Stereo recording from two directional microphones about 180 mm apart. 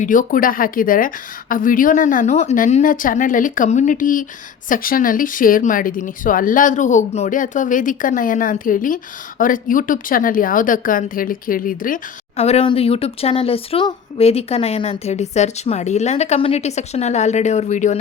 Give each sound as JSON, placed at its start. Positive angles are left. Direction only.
{"t": 0.0, "sound": "a woman's voice", "side_deg": 50}
{"t": 12.4, "sound": "speech", "side_deg": 35}